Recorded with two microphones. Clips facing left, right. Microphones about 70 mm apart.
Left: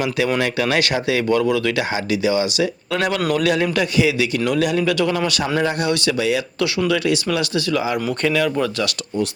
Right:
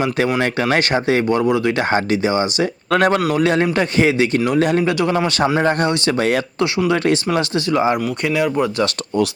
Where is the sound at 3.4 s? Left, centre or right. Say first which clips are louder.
Right 2 dB; right.